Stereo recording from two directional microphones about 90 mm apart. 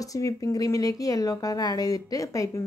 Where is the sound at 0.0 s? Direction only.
40° left (ahead or behind).